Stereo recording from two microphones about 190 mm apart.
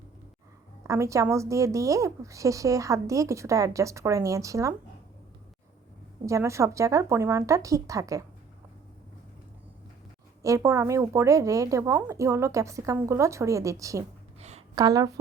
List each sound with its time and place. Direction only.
0.9 s a woman's voice: 15° right (ahead or behind)
6.2 s a woman's voice: 15° right (ahead or behind)
10.4 s a woman's voice: 15° right (ahead or behind)
14.3 s a sound: 35° right (ahead or behind)
14.8 s a woman's voice: 20° right (ahead or behind)